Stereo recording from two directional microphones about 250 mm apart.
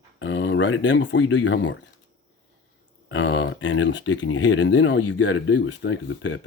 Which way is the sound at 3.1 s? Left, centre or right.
Left.